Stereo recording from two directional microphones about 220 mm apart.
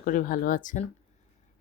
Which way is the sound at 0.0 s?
40° left (ahead or behind).